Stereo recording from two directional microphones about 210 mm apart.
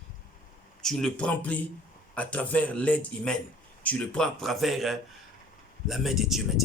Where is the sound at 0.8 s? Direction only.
Centre (ahead or behind).